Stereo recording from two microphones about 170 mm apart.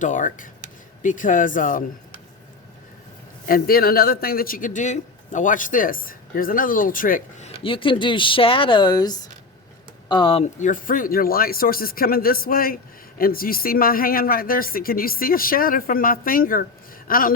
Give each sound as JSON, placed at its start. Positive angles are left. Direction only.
{"t": 0.0, "sound": "speech", "side_deg": 50}
{"t": 3.4, "sound": "speech", "side_deg": 60}
{"t": 7.6, "sound": "speech", "side_deg": 30}
{"t": 10.4, "sound": "speech", "side_deg": 45}